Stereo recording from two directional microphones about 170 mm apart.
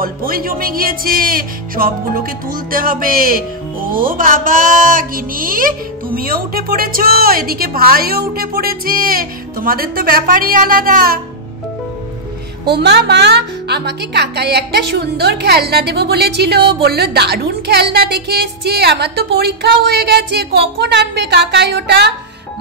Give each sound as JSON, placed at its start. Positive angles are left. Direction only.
{"t": 0.0, "sound": "music", "side_deg": -60}
{"t": 12.6, "sound": "speech", "side_deg": -80}